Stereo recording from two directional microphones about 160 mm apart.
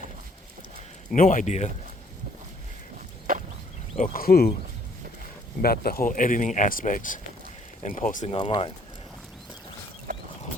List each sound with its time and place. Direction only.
1.1 s speech: 55° left (ahead or behind)
3.3 s a sound: 65° right (ahead or behind)
3.9 s speech: 60° left (ahead or behind)
5.6 s speech: 70° left (ahead or behind); by 8.3 s 55° left (ahead or behind)
8.3 s speech: 35° left (ahead or behind)